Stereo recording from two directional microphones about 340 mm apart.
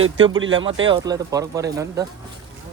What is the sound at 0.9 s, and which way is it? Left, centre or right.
Speech, centre.